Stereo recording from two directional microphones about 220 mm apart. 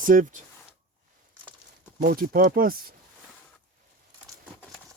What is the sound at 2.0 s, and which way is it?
Speech, 45° right (ahead or behind).